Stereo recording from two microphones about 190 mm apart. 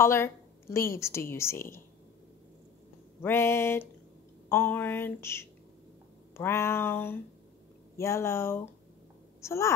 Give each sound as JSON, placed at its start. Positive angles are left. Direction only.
{"t": 0.0, "sound": "a woman's voice", "side_deg": 15}
{"t": 3.2, "sound": "a woman's voice", "side_deg": 15}